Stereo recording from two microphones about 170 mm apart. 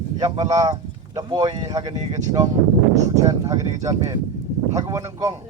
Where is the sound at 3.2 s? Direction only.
20° right (ahead or behind).